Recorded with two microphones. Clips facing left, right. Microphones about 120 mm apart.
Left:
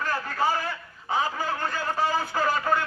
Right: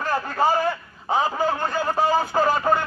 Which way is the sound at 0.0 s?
40° right (ahead or behind).